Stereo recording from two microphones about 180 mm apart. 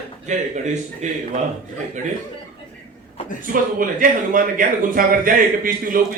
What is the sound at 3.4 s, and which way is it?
A man's voice, 50° right (ahead or behind).